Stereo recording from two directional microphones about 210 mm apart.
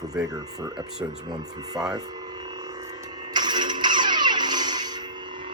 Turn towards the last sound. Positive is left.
turn(degrees=-20)  # may be behind; listen again after turning